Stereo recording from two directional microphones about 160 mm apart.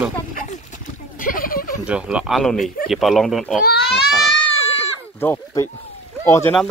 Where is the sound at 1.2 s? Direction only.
60° left (ahead or behind).